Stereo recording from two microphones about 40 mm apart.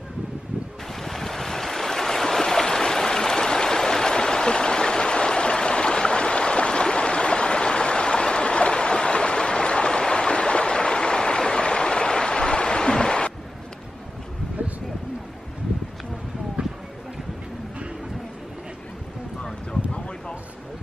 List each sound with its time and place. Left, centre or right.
1.0 s waves: centre